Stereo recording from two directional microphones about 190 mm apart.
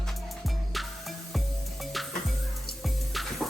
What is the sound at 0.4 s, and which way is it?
Music, centre (ahead or behind).